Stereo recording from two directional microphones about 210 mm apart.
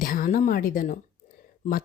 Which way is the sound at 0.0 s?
40° left (ahead or behind).